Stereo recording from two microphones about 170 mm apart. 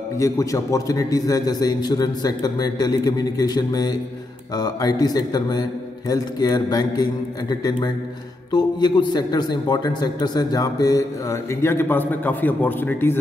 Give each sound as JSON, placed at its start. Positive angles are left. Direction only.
{"t": 0.2, "sound": "a man's voice", "side_deg": 20}